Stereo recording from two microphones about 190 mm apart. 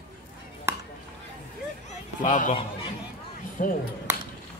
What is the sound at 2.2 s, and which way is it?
Speech, 45° left (ahead or behind).